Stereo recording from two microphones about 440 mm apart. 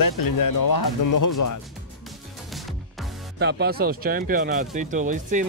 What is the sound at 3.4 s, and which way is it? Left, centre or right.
Speech, right.